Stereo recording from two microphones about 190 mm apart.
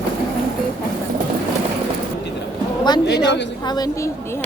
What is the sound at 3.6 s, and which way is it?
Speech, 20° left (ahead or behind).